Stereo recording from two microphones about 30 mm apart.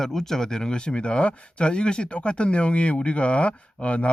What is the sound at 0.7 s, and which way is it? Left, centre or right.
Speech, left.